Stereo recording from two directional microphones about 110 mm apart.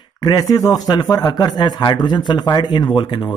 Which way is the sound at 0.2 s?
35° left (ahead or behind).